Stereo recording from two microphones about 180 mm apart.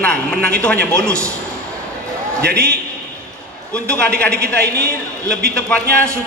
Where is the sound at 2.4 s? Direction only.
65° right (ahead or behind).